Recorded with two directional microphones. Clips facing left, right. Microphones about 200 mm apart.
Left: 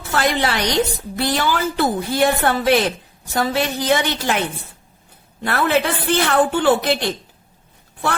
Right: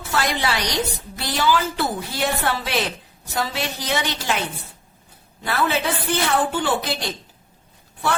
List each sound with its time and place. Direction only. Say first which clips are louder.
0.1 s a woman's voice: left 4 dB; 50° left (ahead or behind)
5.4 s a woman's voice: left 4 dB; 60° left (ahead or behind)